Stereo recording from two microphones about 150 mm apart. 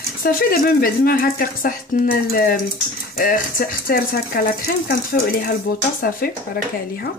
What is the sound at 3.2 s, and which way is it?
Speech, 70° left (ahead or behind).